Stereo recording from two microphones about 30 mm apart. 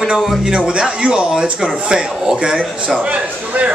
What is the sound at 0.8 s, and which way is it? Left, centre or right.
A man's voice, right.